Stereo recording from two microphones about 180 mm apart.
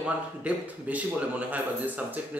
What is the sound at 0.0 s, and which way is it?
Speech, 10° right (ahead or behind).